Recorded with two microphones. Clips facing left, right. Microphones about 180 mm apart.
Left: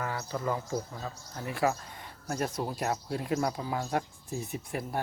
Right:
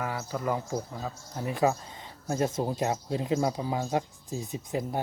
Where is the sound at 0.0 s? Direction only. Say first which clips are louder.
Right 2 dB; 10° right (ahead or behind).